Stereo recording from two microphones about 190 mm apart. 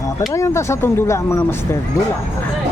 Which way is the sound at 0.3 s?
15° left (ahead or behind).